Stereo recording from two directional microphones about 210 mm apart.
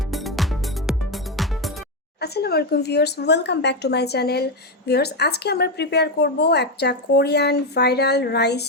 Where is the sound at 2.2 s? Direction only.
50° left (ahead or behind).